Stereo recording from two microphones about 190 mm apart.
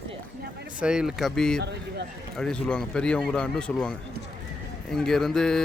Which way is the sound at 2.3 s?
5° left (ahead or behind).